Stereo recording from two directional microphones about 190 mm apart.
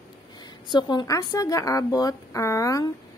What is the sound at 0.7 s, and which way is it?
A woman's voice, 25° left (ahead or behind).